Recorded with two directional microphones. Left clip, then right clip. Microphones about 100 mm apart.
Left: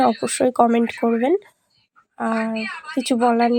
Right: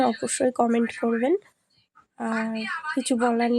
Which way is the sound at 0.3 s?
25° left (ahead or behind).